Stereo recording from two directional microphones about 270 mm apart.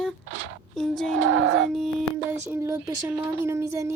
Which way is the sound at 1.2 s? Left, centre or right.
Right.